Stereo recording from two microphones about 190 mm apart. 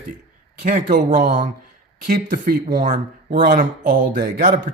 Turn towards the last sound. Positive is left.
turn(degrees=-45)  # may be behind; listen again after turning